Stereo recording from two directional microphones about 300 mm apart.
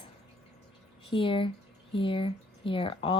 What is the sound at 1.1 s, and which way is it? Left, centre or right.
Speech, centre.